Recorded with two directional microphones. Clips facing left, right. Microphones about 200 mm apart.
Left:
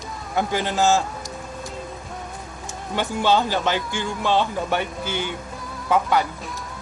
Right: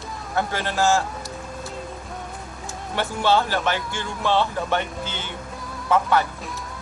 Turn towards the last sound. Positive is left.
turn(degrees=15)  # may be behind; listen again after turning